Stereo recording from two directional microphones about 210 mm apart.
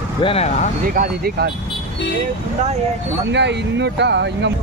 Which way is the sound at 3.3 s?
55° right (ahead or behind).